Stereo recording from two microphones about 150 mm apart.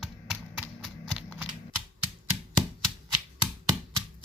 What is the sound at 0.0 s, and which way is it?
Typewriter, 5° right (ahead or behind).